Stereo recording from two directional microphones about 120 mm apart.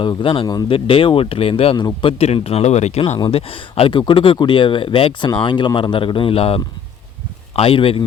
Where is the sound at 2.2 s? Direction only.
60° left (ahead or behind).